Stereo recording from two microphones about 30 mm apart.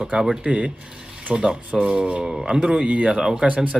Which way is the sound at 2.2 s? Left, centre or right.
Centre.